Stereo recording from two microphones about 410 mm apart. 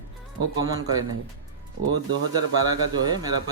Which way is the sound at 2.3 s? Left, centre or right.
Centre.